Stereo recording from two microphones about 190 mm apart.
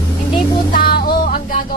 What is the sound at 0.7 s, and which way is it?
Music, 50° left (ahead or behind).